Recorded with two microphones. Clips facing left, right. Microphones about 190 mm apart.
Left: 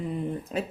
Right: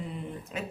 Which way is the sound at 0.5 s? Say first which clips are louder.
Left 5 dB; 40° left (ahead or behind).